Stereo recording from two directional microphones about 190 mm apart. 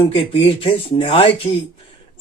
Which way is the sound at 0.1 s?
30° left (ahead or behind).